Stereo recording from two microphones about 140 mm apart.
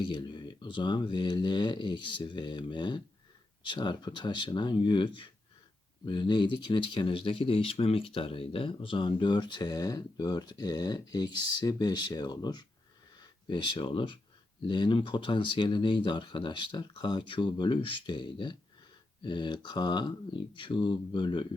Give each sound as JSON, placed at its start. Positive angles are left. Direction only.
{"t": 0.0, "sound": "speech", "side_deg": 35}